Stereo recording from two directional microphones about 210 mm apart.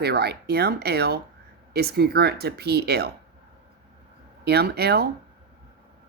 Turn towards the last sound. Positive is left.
turn(degrees=-50)  # may be behind; listen again after turning